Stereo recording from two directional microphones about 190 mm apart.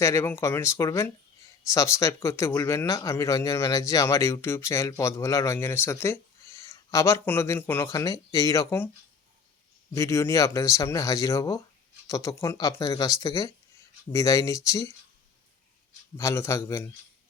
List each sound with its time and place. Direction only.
0.0 s speech: 15° left (ahead or behind)
9.9 s speech: 15° left (ahead or behind)
16.1 s speech: 15° left (ahead or behind)